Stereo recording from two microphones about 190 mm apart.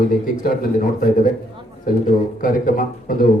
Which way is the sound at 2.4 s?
45° left (ahead or behind).